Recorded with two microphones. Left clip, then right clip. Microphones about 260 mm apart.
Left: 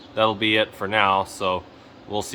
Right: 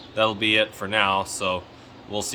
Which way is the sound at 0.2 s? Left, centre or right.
Centre.